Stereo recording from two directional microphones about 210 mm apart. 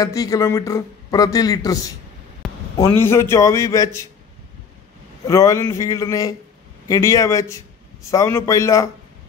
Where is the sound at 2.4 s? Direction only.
Centre (ahead or behind).